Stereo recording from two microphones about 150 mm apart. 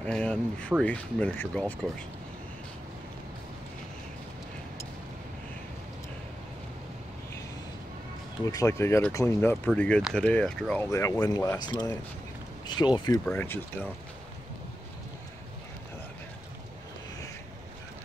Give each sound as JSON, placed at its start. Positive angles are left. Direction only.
{"t": 0.0, "sound": "speech", "side_deg": 10}
{"t": 8.5, "sound": "speech", "side_deg": 20}
{"t": 10.8, "sound": "speech", "side_deg": 20}
{"t": 13.2, "sound": "speech", "side_deg": 10}